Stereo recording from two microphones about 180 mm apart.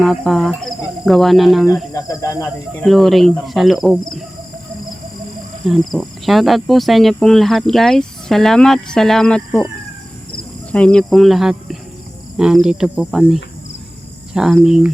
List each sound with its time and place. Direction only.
0.0 s speech: centre (ahead or behind)
1.9 s speech: 20° left (ahead or behind)
2.8 s speech: centre (ahead or behind)
5.6 s speech: centre (ahead or behind)
10.7 s speech: 5° left (ahead or behind)